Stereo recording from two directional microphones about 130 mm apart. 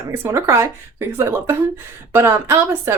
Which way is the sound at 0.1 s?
20° right (ahead or behind).